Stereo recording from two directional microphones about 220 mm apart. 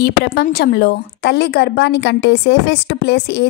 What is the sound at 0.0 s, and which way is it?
A woman's voice, 45° left (ahead or behind).